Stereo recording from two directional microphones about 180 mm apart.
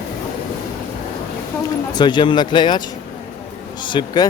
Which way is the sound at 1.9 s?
25° left (ahead or behind).